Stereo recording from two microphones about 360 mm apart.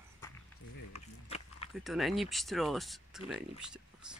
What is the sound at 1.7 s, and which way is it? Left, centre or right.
Speech, centre.